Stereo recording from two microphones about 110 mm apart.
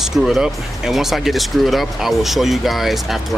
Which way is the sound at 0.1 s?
5° right (ahead or behind).